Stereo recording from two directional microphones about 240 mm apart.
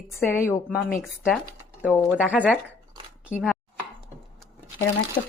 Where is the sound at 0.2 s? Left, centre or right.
Centre.